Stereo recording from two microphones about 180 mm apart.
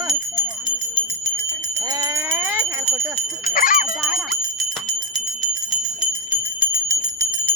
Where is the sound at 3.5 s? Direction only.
50° left (ahead or behind).